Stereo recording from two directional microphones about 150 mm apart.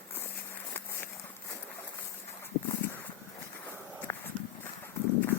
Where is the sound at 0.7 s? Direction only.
15° left (ahead or behind).